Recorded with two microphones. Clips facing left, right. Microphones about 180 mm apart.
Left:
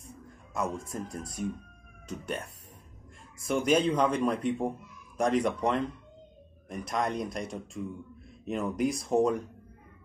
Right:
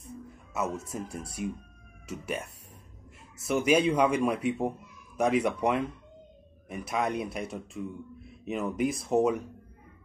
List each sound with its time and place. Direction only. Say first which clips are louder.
0.6 s speech: right 1 dB; 5° right (ahead or behind)
3.4 s speech: right 1 dB; 5° right (ahead or behind)